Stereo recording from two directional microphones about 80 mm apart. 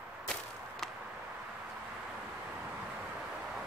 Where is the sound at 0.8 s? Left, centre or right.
Centre.